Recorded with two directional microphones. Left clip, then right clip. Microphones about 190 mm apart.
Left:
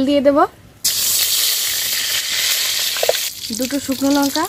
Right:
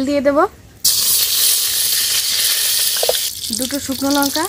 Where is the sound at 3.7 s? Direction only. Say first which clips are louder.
Left 2 dB; 35° left (ahead or behind).